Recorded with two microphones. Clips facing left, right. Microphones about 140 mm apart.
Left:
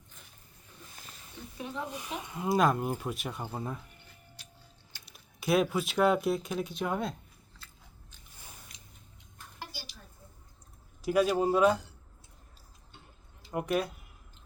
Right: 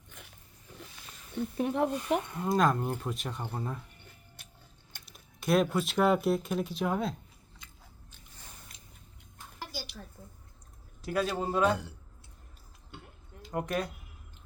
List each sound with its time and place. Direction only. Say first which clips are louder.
1.4 s speech: right 10 dB; 60° right (ahead or behind)
2.2 s speech: left 5 dB; 10° left (ahead or behind)
4.4 s tick-tock: left 1 dB; 55° right (ahead or behind)
5.0 s speech: even; 5° left (ahead or behind)
11.0 s speech: left 5 dB; 10° left (ahead or behind)
13.5 s speech: left 2 dB; 10° left (ahead or behind)